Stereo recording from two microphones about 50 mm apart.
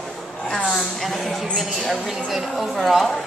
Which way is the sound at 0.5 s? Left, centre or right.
Centre.